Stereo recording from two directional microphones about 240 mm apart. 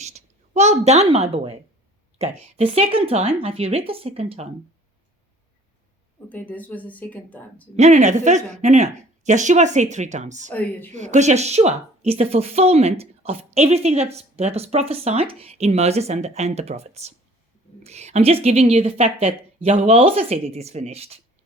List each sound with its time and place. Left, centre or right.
0.0 s a woman's voice: right
6.2 s a woman's voice: centre
7.8 s a woman's voice: right
10.5 s a woman's voice: centre
10.9 s a woman's voice: right